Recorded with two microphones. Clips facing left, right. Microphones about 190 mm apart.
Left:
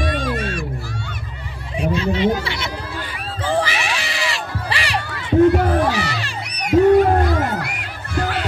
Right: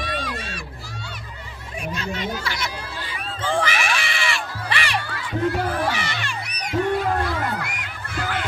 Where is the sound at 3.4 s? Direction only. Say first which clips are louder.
Left 3 dB; 35° left (ahead or behind).